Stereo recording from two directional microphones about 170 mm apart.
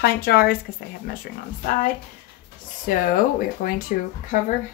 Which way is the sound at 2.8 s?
55° left (ahead or behind).